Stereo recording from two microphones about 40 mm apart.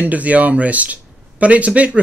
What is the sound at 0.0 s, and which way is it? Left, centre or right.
Speech, right.